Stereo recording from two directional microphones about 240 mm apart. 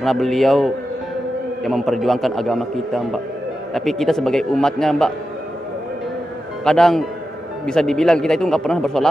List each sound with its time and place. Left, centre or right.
0.0 s a man's voice: centre
6.6 s a man's voice: centre